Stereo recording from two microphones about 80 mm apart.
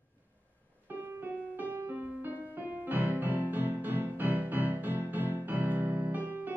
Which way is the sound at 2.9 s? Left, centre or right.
Right.